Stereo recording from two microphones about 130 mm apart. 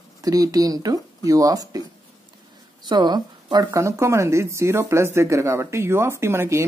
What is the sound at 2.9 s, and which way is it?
Speech, 35° right (ahead or behind).